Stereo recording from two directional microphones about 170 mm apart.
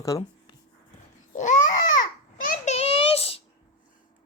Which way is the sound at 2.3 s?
50° left (ahead or behind).